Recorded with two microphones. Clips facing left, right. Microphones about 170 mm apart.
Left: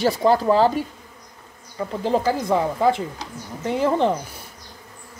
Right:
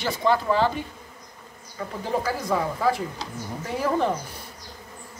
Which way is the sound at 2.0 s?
25° left (ahead or behind).